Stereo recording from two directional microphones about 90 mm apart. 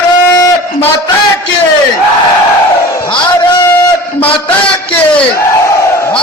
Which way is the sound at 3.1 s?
65° left (ahead or behind).